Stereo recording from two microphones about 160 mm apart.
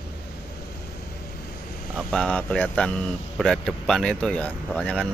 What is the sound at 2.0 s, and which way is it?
Speech, 5° left (ahead or behind).